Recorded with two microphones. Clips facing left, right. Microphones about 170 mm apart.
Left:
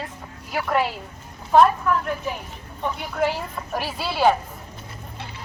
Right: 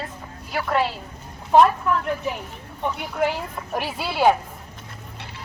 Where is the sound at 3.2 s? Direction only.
20° right (ahead or behind).